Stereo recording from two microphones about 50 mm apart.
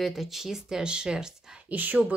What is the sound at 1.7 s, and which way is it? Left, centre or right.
Speech, right.